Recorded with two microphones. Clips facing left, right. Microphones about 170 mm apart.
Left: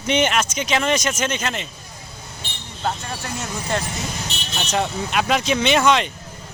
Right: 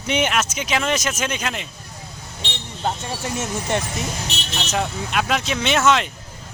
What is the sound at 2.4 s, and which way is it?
Vehicle, 90° right.